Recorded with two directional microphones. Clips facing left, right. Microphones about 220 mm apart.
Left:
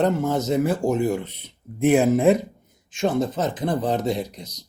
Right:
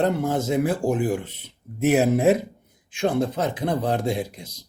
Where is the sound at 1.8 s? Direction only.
5° right (ahead or behind).